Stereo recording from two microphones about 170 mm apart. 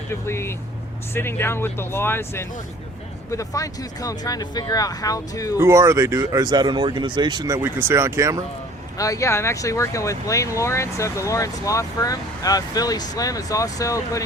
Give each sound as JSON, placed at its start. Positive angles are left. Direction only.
{"t": 0.1, "sound": "speech", "side_deg": 15}
{"t": 5.5, "sound": "speech", "side_deg": -15}
{"t": 9.0, "sound": "speech", "side_deg": 20}